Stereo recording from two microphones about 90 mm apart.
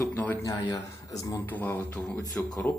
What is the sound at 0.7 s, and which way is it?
Speech, 40° left (ahead or behind).